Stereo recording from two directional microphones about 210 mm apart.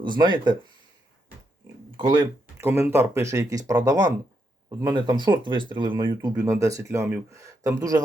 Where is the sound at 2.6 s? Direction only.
10° right (ahead or behind).